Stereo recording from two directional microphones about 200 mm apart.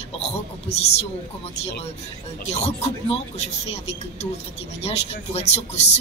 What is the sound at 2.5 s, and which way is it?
Speech, 30° left (ahead or behind).